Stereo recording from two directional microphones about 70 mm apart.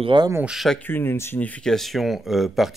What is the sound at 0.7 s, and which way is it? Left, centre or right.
Speech, left.